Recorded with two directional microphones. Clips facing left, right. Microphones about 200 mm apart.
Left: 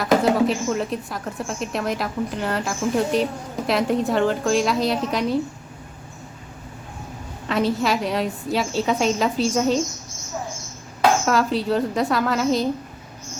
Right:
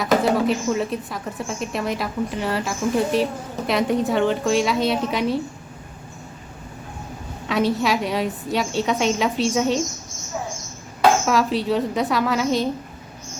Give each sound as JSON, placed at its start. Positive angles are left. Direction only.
{"t": 0.0, "sound": "speech", "side_deg": 0}
{"t": 7.4, "sound": "speech", "side_deg": 0}
{"t": 11.3, "sound": "speech", "side_deg": 0}